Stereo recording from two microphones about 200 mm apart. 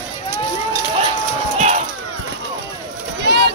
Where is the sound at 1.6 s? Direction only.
35° right (ahead or behind).